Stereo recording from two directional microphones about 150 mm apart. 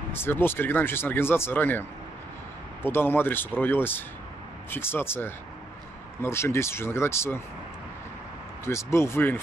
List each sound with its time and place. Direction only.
0.1 s speech: 15° left (ahead or behind)
8.6 s speech: 15° left (ahead or behind)